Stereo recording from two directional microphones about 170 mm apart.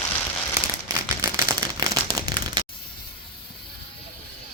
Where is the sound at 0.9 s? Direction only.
20° right (ahead or behind).